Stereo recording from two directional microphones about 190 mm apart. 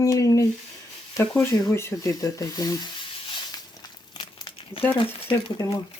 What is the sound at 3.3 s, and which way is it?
Crumpling, 25° left (ahead or behind).